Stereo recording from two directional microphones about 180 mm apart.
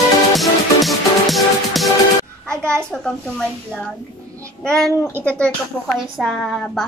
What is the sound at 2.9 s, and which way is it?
Speech, centre (ahead or behind).